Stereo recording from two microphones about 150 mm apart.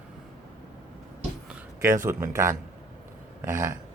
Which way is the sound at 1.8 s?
20° right (ahead or behind).